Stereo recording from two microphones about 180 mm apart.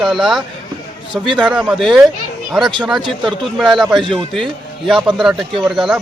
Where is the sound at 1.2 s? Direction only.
25° right (ahead or behind).